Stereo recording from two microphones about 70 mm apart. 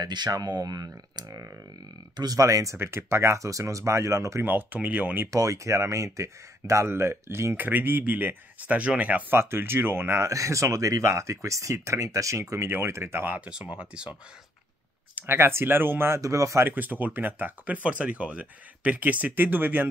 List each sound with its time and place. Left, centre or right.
0.0 s speech: right
2.4 s speech: right
2.8 s speech: right
4.5 s speech: right
5.3 s speech: right
7.5 s speech: right
9.3 s speech: right
10.2 s speech: right
13.5 s speech: centre
15.2 s speech: right
16.2 s speech: right
16.6 s speech: right